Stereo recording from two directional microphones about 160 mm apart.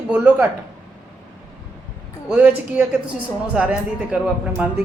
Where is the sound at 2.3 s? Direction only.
10° right (ahead or behind).